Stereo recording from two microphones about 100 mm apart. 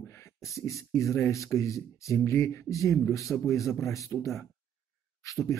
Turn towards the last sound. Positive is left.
turn(degrees=30)  # may be behind; listen again after turning